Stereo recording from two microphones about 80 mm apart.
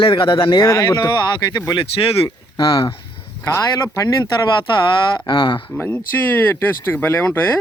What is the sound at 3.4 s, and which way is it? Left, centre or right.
Speech, left.